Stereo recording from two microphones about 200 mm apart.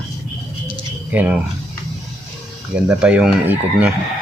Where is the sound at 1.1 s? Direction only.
5° right (ahead or behind).